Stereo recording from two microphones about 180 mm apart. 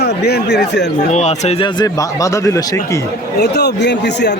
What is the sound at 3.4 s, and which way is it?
Speech, 70° left (ahead or behind).